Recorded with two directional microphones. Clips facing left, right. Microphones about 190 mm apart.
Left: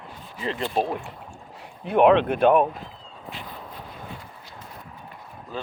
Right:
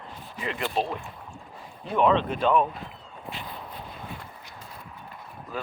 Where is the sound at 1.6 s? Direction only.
60° left (ahead or behind).